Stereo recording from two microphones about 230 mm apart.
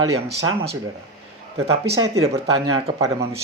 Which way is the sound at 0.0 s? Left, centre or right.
Right.